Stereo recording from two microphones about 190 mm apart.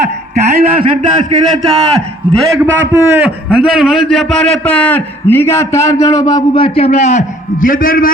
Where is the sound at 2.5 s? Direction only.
15° right (ahead or behind).